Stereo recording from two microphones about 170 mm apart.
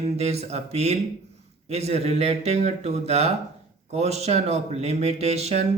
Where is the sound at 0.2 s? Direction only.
40° right (ahead or behind).